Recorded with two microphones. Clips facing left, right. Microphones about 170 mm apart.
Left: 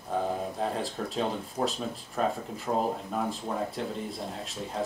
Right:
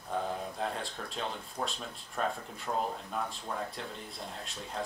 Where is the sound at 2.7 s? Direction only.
35° left (ahead or behind).